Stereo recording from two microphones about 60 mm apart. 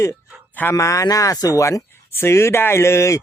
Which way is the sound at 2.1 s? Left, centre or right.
Left.